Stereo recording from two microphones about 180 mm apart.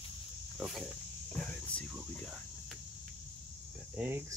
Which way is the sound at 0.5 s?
Centre (ahead or behind).